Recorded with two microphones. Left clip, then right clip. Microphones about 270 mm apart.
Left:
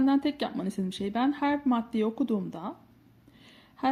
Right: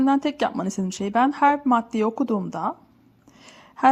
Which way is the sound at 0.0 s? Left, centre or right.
Centre.